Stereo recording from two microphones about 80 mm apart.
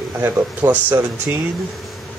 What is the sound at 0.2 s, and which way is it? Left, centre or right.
Speech, right.